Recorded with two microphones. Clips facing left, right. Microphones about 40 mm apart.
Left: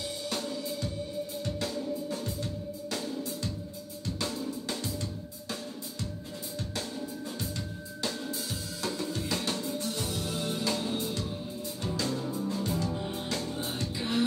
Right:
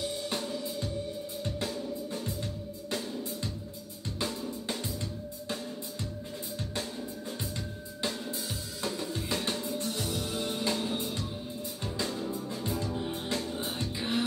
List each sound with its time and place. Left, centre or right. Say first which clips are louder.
1.4 s music: right 1 dB; right
4.0 s drum: left 1 dB; right
7.3 s music: left 1 dB; centre
9.9 s music: even; centre
12.9 s music: even; centre
13.7 s music: left 1 dB; centre